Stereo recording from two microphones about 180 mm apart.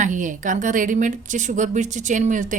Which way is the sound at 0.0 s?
45° right (ahead or behind).